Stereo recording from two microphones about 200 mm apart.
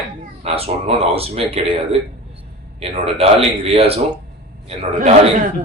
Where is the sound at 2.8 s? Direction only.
30° right (ahead or behind).